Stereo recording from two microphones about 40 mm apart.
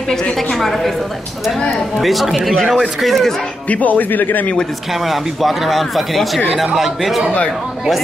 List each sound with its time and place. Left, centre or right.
0.1 s a woman's voice: centre
2.0 s speech: centre
3.6 s speech: left
5.0 s speech: centre
6.5 s speech: centre